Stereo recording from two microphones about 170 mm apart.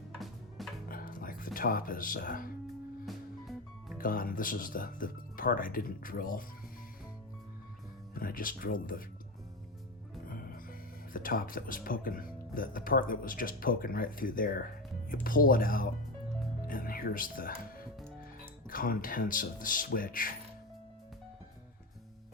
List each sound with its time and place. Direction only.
0.2 s music: centre (ahead or behind)
0.9 s speech: 55° left (ahead or behind)
3.1 s music: centre (ahead or behind)
3.9 s speech: 55° left (ahead or behind)
8.1 s speech: 55° left (ahead or behind)
10.2 s music: 55° left (ahead or behind)
11.1 s speech: 55° left (ahead or behind)